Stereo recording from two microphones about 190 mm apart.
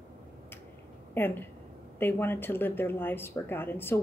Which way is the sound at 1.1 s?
10° left (ahead or behind).